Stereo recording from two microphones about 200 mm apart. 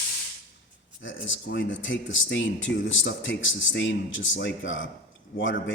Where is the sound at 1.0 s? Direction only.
70° left (ahead or behind).